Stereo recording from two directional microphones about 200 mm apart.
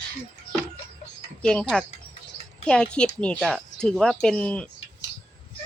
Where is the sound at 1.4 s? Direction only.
5° left (ahead or behind).